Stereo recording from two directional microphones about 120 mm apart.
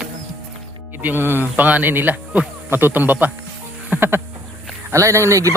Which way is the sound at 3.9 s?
20° right (ahead or behind).